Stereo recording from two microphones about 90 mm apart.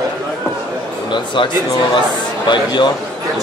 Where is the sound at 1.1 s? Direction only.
60° left (ahead or behind).